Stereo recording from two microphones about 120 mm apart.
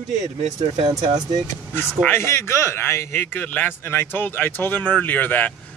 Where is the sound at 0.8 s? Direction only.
40° right (ahead or behind).